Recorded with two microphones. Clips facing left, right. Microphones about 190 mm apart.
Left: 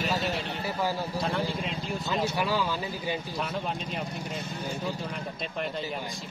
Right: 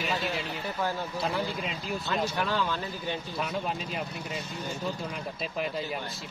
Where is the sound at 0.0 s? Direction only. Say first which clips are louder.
Left 2 dB; 40° left (ahead or behind).